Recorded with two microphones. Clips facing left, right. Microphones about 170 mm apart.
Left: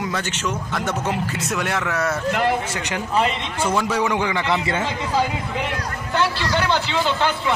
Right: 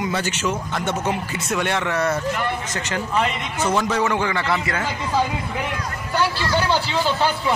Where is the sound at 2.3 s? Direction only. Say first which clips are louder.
Left 4 dB; 90° left.